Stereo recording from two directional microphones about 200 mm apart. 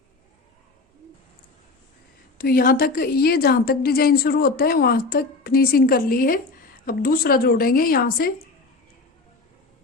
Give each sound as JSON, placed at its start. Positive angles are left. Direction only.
{"t": 2.4, "sound": "a woman's voice", "side_deg": 45}